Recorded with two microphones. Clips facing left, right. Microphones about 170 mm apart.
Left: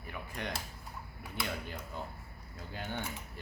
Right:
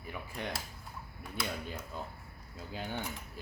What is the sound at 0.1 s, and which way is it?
Speech, 10° right (ahead or behind).